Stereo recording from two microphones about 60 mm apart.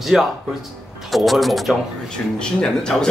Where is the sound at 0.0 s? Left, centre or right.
Centre.